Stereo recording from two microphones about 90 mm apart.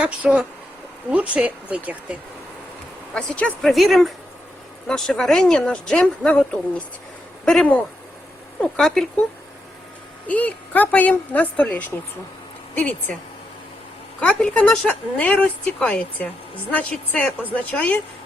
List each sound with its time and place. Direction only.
0.0 s speech: 10° right (ahead or behind)
3.2 s a woman's voice: 15° left (ahead or behind)
3.7 s a woman's voice: centre (ahead or behind)
10.2 s a woman's voice: 15° left (ahead or behind)
14.2 s a woman's voice: 15° left (ahead or behind)